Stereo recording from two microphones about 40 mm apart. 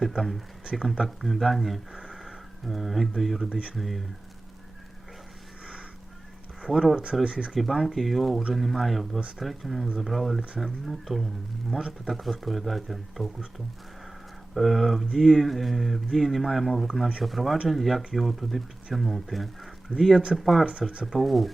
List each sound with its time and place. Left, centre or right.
0.0 s speech: centre
2.2 s a sound: centre
3.2 s speech: centre
6.9 s speech: right
7.5 s speech: centre
14.5 s speech: centre